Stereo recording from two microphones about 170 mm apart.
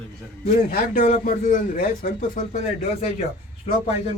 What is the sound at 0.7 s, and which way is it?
A man's voice, 60° left (ahead or behind).